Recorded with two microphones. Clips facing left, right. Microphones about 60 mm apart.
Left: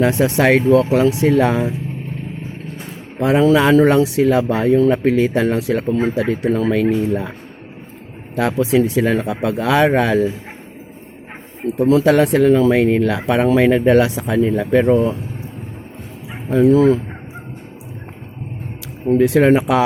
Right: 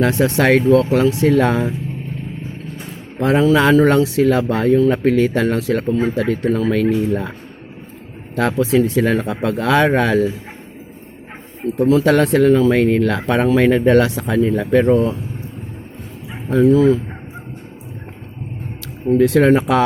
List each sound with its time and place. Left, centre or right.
0.0 s speech: left
1.4 s speech: centre
3.2 s speech: centre
5.9 s speech: left
6.1 s speech: centre
8.5 s speech: centre
9.0 s speech: centre
11.6 s speech: left
11.9 s speech: centre
16.6 s speech: left
19.1 s speech: centre